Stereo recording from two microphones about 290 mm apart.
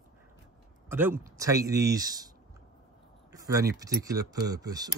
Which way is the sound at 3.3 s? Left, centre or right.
Centre.